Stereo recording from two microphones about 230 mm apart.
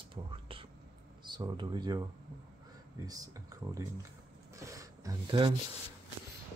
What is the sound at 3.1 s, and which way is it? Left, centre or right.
Speech, centre.